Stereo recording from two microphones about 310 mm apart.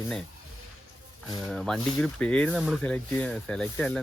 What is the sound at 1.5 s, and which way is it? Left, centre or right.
Speech, centre.